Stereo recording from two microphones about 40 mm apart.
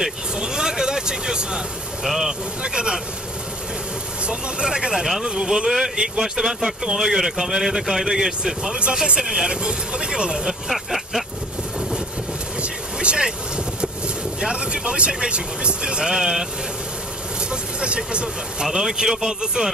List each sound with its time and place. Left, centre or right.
0.0 s vehicle: centre
2.0 s speech: centre
2.6 s speech: centre
4.3 s speech: right
8.7 s speech: right
10.4 s vehicle: centre
12.6 s vehicle: right
13.7 s speech: right
17.5 s speech: right
18.7 s speech: centre